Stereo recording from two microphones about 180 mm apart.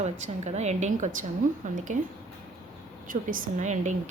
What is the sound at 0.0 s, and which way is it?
A woman's voice, 40° right (ahead or behind).